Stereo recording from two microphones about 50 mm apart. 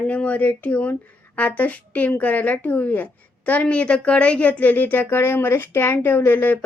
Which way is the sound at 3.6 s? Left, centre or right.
Left.